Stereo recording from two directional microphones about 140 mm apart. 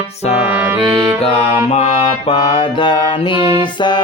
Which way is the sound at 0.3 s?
10° right (ahead or behind).